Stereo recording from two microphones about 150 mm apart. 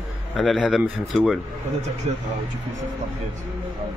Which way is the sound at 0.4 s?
5° right (ahead or behind).